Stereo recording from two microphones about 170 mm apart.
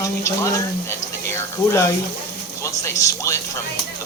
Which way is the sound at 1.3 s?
15° left (ahead or behind).